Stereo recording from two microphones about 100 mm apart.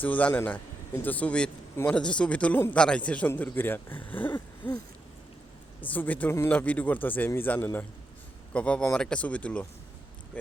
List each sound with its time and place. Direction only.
0.0 s speech: 15° left (ahead or behind)
5.8 s speech: 15° left (ahead or behind)